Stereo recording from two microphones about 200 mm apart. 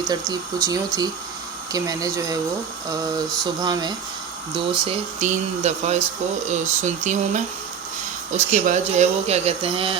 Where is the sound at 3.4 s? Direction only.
20° right (ahead or behind).